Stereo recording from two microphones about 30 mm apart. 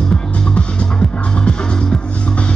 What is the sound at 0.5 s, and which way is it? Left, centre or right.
Music, left.